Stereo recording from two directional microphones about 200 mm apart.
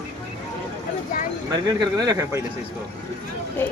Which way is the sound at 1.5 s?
20° right (ahead or behind).